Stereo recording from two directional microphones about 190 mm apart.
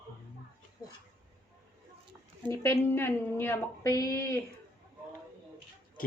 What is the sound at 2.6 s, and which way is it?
A woman's voice, 10° left (ahead or behind).